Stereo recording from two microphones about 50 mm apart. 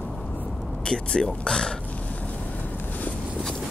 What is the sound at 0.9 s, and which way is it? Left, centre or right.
Speech, centre.